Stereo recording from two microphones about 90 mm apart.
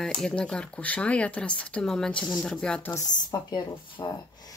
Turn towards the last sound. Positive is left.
turn(degrees=50)  # may be behind; listen again after turning